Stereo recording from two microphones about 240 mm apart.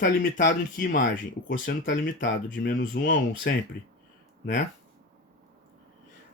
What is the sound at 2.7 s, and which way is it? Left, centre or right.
Speech, left.